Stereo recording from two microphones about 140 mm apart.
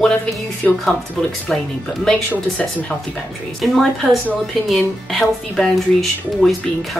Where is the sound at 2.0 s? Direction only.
10° left (ahead or behind).